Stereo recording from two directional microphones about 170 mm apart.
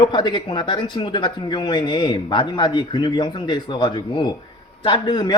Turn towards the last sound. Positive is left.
turn(degrees=25)  # may be behind; listen again after turning